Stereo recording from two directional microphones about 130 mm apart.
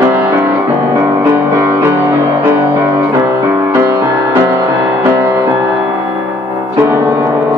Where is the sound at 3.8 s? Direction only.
15° right (ahead or behind).